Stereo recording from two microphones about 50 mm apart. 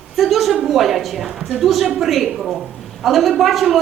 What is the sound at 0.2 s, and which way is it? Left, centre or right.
A woman's voice, centre.